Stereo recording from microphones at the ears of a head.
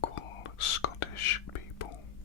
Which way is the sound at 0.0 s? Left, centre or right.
Left.